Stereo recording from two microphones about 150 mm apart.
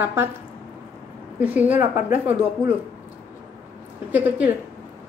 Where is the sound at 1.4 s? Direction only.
10° right (ahead or behind).